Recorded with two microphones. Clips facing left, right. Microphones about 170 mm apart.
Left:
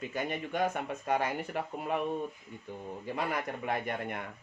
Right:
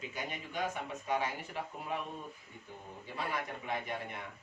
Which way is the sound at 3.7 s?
55° left (ahead or behind).